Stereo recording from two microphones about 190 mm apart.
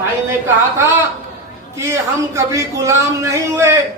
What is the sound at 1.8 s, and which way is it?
Speech, 15° right (ahead or behind).